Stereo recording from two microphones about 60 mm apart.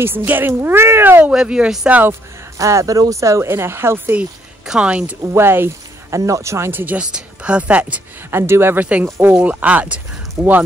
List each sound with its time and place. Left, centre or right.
0.0 s speech: right
1.3 s speech: centre
1.9 s speech: right
2.6 s speech: right
3.4 s speech: right
4.6 s speech: centre
5.3 s speech: right
6.0 s speech: right
6.7 s speech: right
7.0 s speech: centre
8.3 s speech: right
8.7 s speech: right